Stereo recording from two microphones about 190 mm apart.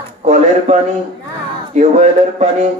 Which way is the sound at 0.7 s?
35° right (ahead or behind).